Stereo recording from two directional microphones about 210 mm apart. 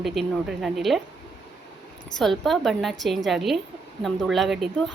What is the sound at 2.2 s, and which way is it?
A woman's voice, centre (ahead or behind).